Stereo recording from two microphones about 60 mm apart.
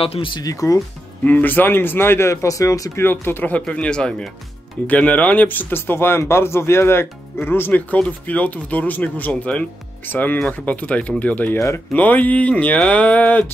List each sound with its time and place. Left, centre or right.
0.4 s speech: left
1.2 s speech: left
2.4 s speech: left
3.0 s speech: left
3.5 s speech: centre
4.8 s speech: left
7.9 s speech: left
11.5 s speech: left
11.9 s speech: left